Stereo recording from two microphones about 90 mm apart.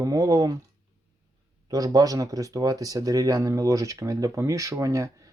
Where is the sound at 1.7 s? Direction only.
40° right (ahead or behind).